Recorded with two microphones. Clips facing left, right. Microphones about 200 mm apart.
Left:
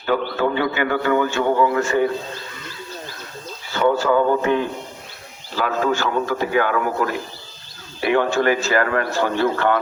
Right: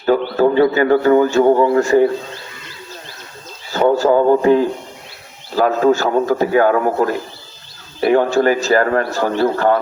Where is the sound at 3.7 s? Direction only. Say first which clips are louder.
Right 4 dB; 40° right (ahead or behind).